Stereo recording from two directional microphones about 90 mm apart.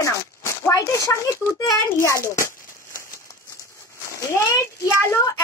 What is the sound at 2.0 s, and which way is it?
Crumpling, 35° left (ahead or behind).